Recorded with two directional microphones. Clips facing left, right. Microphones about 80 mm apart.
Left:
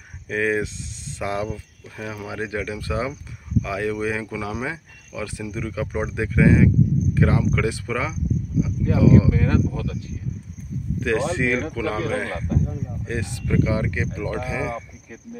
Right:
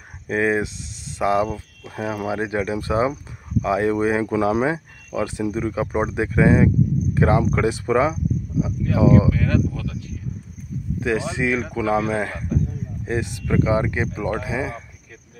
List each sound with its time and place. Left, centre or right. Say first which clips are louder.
0.3 s speech: right 2 dB; right
9.3 s speech: even; left
11.0 s speech: left 1 dB; centre